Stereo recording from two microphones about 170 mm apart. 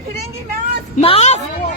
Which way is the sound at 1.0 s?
40° left (ahead or behind).